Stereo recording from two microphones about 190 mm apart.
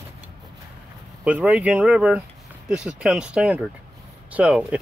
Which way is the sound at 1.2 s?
5° right (ahead or behind).